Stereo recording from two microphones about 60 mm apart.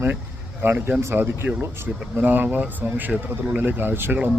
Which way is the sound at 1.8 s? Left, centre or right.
Right.